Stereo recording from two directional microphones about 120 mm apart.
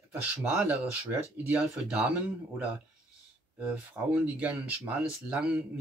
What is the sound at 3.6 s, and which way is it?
Speech, 10° right (ahead or behind).